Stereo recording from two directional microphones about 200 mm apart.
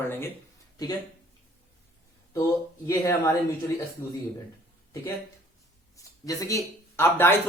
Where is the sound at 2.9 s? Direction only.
15° left (ahead or behind).